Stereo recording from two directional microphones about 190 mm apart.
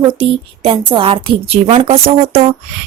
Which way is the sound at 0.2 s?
30° right (ahead or behind).